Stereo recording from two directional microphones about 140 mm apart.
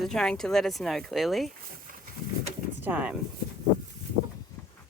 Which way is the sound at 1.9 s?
80° right.